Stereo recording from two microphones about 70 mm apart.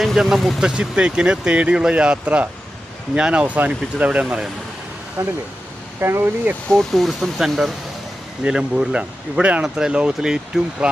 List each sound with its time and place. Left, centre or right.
0.0 s speech: centre
0.6 s speech: centre
5.2 s speech: right
6.0 s speech: right
6.7 s speech: centre
8.4 s speech: centre